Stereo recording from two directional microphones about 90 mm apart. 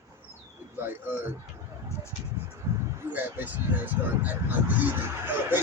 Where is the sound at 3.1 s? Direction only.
20° right (ahead or behind).